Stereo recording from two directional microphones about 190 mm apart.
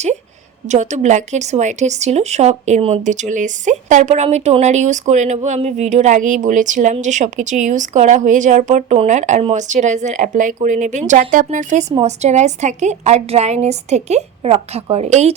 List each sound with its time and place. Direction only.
0.7 s a woman's voice: 40° right (ahead or behind)